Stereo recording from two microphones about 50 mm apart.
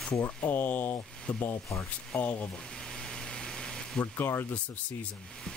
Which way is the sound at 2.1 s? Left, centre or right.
Left.